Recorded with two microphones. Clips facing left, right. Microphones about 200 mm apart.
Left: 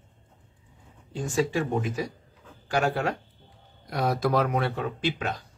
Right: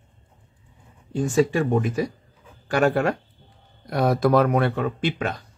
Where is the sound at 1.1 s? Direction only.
55° right (ahead or behind).